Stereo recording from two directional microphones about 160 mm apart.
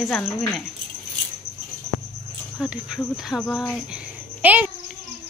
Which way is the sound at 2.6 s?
5° right (ahead or behind).